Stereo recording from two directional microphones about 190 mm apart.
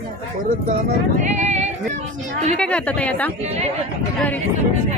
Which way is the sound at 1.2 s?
40° right (ahead or behind).